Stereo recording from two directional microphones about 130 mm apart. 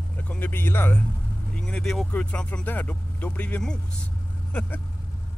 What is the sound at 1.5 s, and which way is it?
Speech, 5° left (ahead or behind).